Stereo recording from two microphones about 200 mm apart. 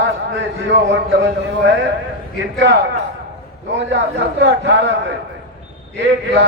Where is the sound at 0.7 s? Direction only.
65° right (ahead or behind).